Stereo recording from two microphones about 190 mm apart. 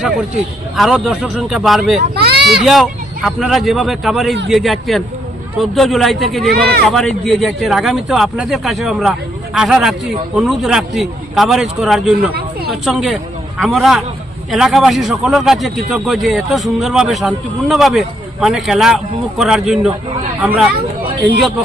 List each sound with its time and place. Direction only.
0.8 s speech: centre (ahead or behind)
2.1 s a sound: 55° right (ahead or behind)
2.5 s speech: centre (ahead or behind)
6.5 s speech: 55° right (ahead or behind)
6.8 s speech: centre (ahead or behind)
12.3 s a sound: 55° right (ahead or behind)
12.7 s speech: centre (ahead or behind)